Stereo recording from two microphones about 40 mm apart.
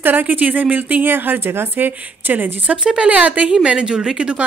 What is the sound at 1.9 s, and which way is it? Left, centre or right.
Speech, right.